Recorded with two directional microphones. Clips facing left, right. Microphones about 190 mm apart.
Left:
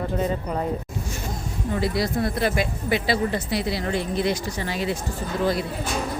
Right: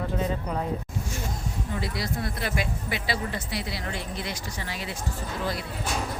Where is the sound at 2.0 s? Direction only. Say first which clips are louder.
Left 8 dB; 30° left (ahead or behind).